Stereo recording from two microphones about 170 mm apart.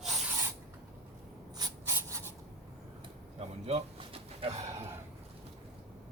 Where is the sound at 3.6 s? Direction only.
35° right (ahead or behind).